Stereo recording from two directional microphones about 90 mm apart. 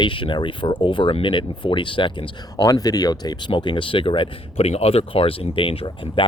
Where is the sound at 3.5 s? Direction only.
65° left (ahead or behind).